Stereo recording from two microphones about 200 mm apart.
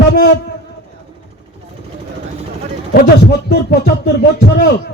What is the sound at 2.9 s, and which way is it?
Speech, 55° left (ahead or behind).